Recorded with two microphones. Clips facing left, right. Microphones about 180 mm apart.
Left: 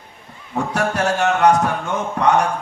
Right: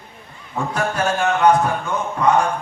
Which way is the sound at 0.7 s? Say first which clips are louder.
Left 1 dB; 75° left (ahead or behind).